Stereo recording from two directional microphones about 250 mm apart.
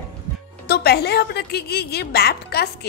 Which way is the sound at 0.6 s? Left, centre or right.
Left.